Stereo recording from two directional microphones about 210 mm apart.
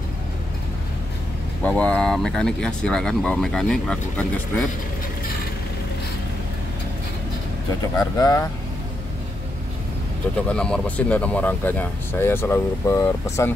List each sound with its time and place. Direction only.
1.6 s speech: 5° left (ahead or behind)
8.2 s speech: 15° left (ahead or behind)
10.5 s speech: 5° left (ahead or behind)